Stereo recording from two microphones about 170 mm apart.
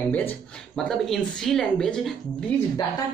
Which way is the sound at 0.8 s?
Centre (ahead or behind).